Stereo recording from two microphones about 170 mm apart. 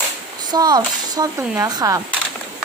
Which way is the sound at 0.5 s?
25° right (ahead or behind).